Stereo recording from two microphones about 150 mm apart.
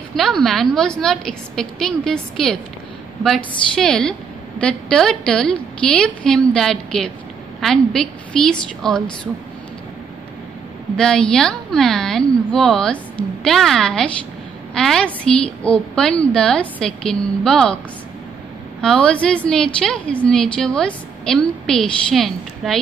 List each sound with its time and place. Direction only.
0.1 s a woman's voice: centre (ahead or behind)
11.0 s a woman's voice: 5° left (ahead or behind)
18.8 s a woman's voice: 5° left (ahead or behind)